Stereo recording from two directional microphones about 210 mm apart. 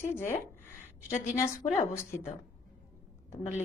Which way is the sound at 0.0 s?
10° left (ahead or behind).